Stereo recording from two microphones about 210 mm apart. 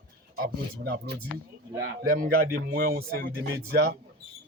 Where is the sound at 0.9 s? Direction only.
50° right (ahead or behind).